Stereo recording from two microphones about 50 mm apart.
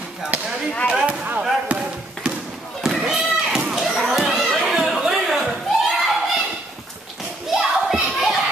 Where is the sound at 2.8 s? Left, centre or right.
Centre.